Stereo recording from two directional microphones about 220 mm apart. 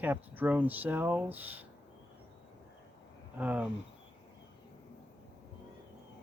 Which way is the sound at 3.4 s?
5° right (ahead or behind).